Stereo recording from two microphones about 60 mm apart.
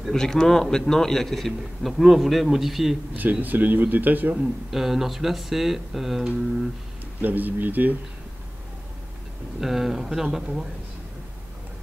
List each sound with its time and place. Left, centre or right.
0.0 s a man's voice: centre
3.2 s a man's voice: right
4.4 s speech: centre
7.2 s a man's voice: right
9.6 s speech: centre